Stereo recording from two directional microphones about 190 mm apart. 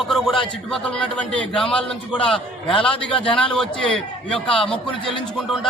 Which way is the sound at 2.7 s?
30° left (ahead or behind).